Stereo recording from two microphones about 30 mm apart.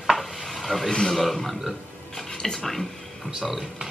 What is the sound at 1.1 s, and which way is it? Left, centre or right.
A man's voice, centre.